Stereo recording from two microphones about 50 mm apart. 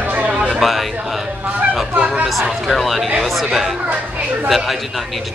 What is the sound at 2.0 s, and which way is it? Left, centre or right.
Speech, centre.